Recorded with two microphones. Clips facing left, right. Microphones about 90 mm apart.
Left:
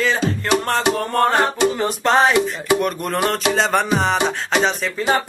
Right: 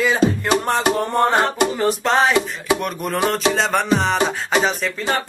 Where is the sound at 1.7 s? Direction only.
Centre (ahead or behind).